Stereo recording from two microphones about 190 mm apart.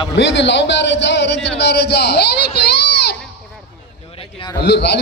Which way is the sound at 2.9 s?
60° left (ahead or behind).